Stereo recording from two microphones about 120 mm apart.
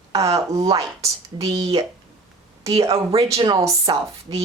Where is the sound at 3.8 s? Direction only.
50° right (ahead or behind).